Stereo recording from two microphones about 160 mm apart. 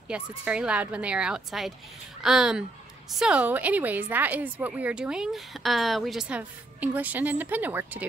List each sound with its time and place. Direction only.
0.1 s a woman's voice: 5° right (ahead or behind)